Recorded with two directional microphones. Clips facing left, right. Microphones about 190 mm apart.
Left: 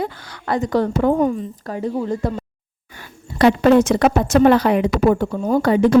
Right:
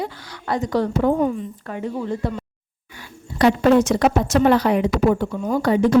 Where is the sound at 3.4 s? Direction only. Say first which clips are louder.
Left 2 dB; 70° left (ahead or behind); by 5.6 s 40° left (ahead or behind).